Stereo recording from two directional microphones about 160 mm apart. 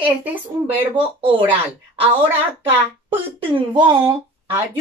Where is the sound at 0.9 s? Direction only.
35° right (ahead or behind).